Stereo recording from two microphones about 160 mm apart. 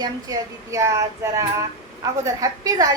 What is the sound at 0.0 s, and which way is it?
A woman's voice, 20° right (ahead or behind).